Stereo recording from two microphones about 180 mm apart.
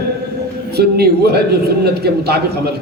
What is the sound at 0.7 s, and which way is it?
A man's voice, 60° right (ahead or behind).